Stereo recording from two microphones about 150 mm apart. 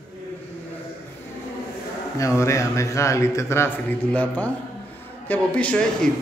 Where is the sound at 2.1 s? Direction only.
20° left (ahead or behind).